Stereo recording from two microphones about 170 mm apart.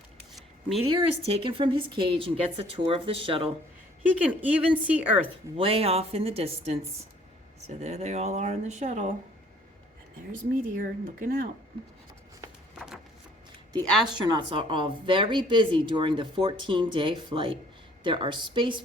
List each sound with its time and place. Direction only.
1.2 s a woman's voice: 35° right (ahead or behind)
4.2 s a woman's voice: 10° right (ahead or behind)
5.5 s a woman's voice: 35° right (ahead or behind)
10.8 s speech: 55° right (ahead or behind)
13.8 s a woman's voice: centre (ahead or behind)
14.2 s speech: 25° right (ahead or behind)